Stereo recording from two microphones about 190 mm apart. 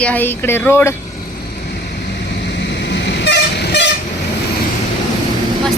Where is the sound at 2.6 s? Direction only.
65° left (ahead or behind).